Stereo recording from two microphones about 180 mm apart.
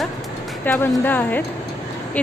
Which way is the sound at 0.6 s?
10° left (ahead or behind).